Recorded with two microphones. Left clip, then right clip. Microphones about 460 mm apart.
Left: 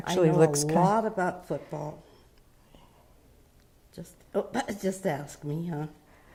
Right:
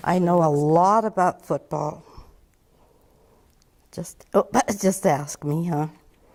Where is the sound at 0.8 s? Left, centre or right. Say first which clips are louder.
Right 5 dB; right.